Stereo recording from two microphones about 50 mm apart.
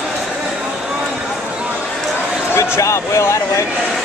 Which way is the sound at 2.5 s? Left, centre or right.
Left.